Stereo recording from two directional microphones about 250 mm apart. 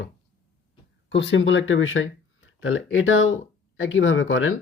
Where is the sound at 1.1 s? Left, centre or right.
Left.